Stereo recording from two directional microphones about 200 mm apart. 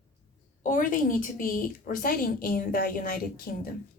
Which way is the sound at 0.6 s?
40° left (ahead or behind).